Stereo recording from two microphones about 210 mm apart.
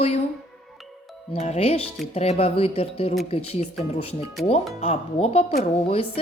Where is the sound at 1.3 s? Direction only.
30° left (ahead or behind).